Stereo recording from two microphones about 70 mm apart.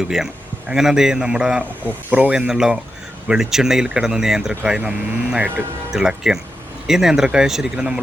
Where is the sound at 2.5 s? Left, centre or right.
Centre.